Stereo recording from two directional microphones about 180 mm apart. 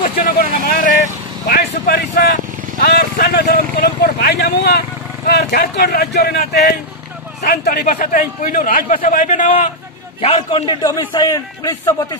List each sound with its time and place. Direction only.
0.0 s a man's voice: 50° left (ahead or behind)
10.2 s a man's voice: 30° left (ahead or behind)